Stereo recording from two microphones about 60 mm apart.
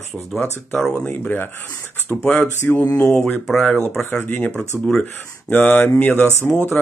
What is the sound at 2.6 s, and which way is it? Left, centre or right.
Speech, left.